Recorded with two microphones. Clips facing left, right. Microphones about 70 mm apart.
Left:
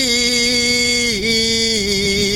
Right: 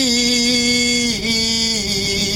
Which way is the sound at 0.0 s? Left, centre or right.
Left.